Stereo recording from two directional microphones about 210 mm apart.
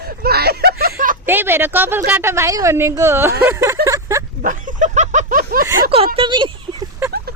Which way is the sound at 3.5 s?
15° right (ahead or behind).